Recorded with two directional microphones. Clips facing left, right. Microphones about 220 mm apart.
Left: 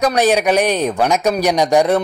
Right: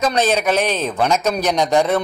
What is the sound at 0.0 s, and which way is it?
Speech, 15° left (ahead or behind).